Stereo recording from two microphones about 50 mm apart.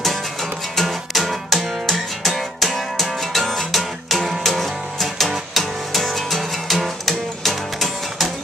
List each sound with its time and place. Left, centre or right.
0.0 s music: centre